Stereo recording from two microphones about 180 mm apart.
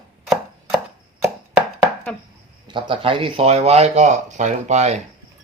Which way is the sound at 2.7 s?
30° right (ahead or behind).